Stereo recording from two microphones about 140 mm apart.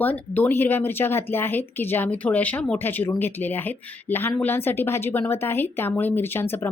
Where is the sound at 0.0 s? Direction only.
15° left (ahead or behind).